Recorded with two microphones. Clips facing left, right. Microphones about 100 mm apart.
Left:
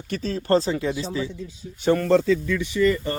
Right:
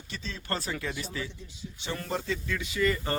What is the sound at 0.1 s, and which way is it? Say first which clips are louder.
Speech: left 14 dB; 45° left (ahead or behind).